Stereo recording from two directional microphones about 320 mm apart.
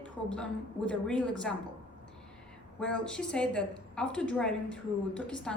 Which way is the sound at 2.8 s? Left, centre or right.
Centre.